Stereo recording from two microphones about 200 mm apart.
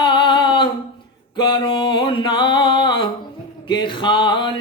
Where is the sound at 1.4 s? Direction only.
25° left (ahead or behind).